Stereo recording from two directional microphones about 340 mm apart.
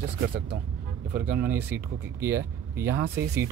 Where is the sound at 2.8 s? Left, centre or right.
Right.